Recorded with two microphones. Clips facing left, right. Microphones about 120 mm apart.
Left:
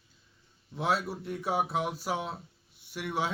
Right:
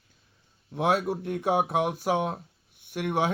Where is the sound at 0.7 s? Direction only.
55° right (ahead or behind).